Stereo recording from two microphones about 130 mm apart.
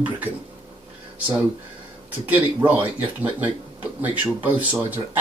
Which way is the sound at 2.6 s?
15° right (ahead or behind).